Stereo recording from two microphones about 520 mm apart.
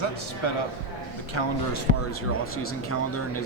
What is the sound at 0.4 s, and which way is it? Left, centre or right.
Speech, left.